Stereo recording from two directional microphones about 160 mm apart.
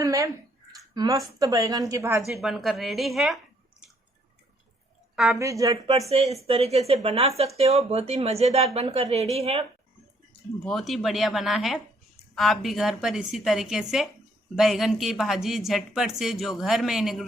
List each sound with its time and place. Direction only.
0.0 s a sound: 20° right (ahead or behind)
0.9 s a woman's voice: 20° right (ahead or behind)
2.2 s speech: centre (ahead or behind)
5.1 s speech: centre (ahead or behind)
5.4 s a woman's voice: 20° right (ahead or behind)
6.1 s speech: 40° right (ahead or behind)
10.7 s speech: centre (ahead or behind)